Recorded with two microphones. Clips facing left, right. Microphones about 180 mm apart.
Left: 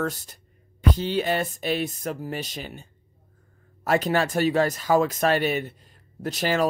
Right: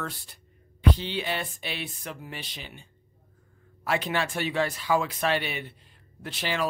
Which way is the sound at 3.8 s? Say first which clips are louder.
Left 6 dB; 40° left (ahead or behind).